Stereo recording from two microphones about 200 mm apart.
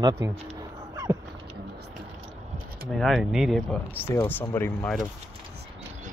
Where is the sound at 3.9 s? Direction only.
10° left (ahead or behind).